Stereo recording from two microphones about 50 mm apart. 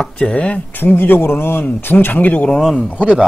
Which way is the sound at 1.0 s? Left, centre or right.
Left.